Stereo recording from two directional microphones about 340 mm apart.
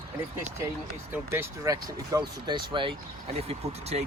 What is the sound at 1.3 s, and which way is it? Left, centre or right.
Speech, centre.